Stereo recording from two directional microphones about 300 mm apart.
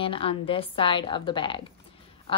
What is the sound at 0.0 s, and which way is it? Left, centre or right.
A woman's voice, centre.